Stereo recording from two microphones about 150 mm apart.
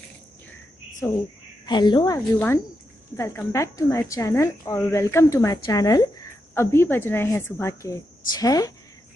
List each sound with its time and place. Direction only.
1.0 s speech: 20° left (ahead or behind)
1.7 s a woman's voice: 30° left (ahead or behind)
2.1 s a woman's voice: 15° left (ahead or behind)